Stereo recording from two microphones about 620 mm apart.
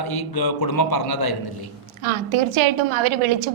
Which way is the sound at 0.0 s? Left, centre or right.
Left.